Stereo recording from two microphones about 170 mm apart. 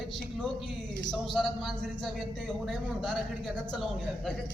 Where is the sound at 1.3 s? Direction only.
Centre (ahead or behind).